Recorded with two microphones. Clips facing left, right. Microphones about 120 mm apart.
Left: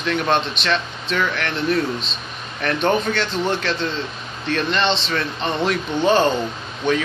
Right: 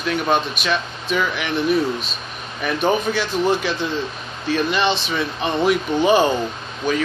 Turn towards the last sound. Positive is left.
turn(degrees=-5)  # may be behind; listen again after turning